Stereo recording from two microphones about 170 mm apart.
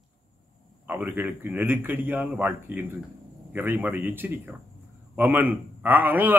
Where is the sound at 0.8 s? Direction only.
10° right (ahead or behind).